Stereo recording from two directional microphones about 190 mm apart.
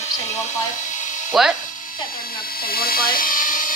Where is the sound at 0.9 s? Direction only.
40° left (ahead or behind).